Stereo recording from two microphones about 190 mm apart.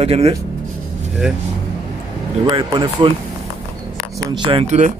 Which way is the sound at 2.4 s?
25° right (ahead or behind).